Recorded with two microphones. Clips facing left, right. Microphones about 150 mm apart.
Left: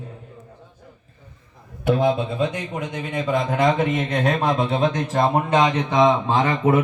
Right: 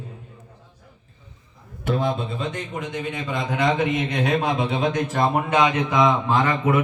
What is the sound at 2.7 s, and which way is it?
A man's voice, 55° left (ahead or behind).